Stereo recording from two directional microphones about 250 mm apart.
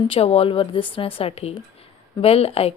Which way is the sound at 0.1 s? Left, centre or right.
Left.